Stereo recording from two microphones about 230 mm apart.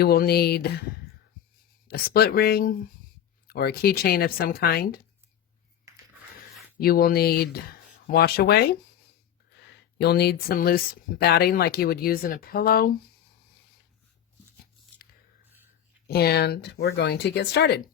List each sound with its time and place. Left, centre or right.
0.0 s speech: left
1.9 s speech: left
6.7 s speech: left
16.0 s speech: left